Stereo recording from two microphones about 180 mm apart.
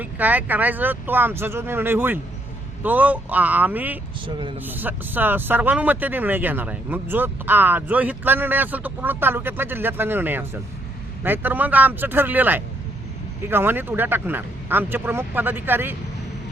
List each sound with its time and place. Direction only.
0.0 s speech: 10° right (ahead or behind)
4.3 s speech: 25° right (ahead or behind)
4.6 s speech: 10° right (ahead or behind)